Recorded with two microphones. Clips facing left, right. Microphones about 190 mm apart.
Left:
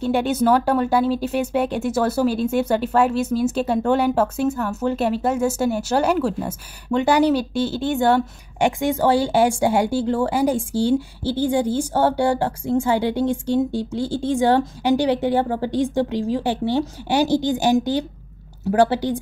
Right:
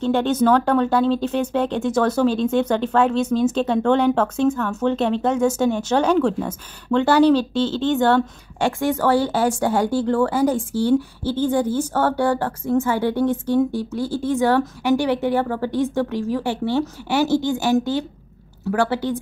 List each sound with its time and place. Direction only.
0.0 s speech: 10° left (ahead or behind)
14.1 s a woman's voice: 25° left (ahead or behind)
18.7 s a woman's voice: 35° left (ahead or behind)